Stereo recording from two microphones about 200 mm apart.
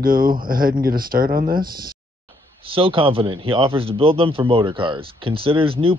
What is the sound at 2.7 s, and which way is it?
Speech, 25° right (ahead or behind).